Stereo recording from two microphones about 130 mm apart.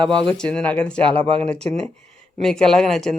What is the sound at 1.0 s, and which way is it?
Speech, 45° right (ahead or behind).